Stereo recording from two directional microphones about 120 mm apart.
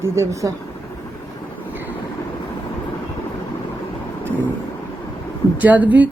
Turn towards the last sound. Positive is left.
turn(degrees=-15)  # may be behind; listen again after turning